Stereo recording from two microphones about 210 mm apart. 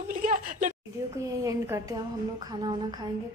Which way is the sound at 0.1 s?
40° right (ahead or behind).